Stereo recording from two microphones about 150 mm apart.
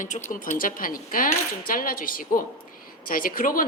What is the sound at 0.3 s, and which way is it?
A woman's voice, 60° left (ahead or behind).